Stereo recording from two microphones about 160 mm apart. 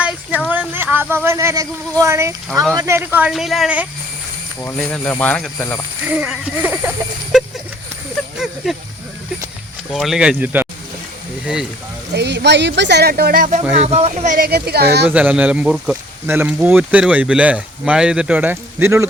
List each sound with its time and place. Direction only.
0.0 s a sound: 10° right (ahead or behind)
0.5 s speech: 10° right (ahead or behind)
4.6 s speech: 10° left (ahead or behind)
6.1 s speech: 10° right (ahead or behind)
7.3 s a sound: centre (ahead or behind)
8.6 s speech: centre (ahead or behind)
9.9 s speech: centre (ahead or behind)
12.1 s speech: 90° right; by 13.6 s 60° right (ahead or behind)
13.7 s speech: 40° right (ahead or behind)
14.3 s speech: 70° right (ahead or behind); by 15.1 s 90° right
15.1 s speech: 10° right (ahead or behind)